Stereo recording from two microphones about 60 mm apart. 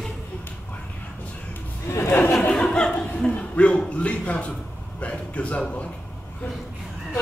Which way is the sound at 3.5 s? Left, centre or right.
Centre.